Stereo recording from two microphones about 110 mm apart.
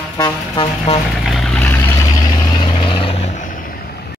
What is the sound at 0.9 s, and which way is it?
Vehicle, 65° left (ahead or behind).